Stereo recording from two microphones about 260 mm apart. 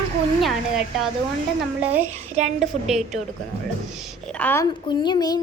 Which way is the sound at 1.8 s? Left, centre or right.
Centre.